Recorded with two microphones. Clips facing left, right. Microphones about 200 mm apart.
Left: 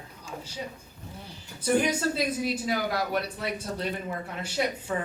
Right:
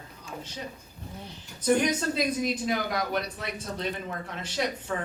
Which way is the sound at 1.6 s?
10° left (ahead or behind).